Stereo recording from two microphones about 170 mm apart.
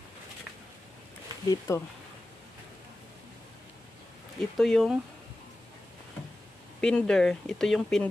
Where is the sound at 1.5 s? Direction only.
15° left (ahead or behind).